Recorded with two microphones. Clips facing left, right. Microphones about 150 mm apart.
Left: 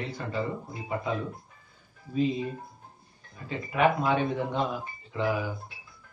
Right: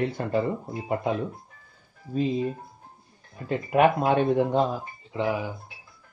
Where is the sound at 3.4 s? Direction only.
50° right (ahead or behind).